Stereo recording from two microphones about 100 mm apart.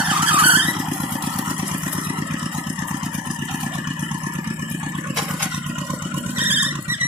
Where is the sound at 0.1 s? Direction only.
15° right (ahead or behind).